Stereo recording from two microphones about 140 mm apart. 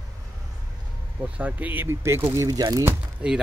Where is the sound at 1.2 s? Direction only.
10° right (ahead or behind); by 2.9 s 25° right (ahead or behind).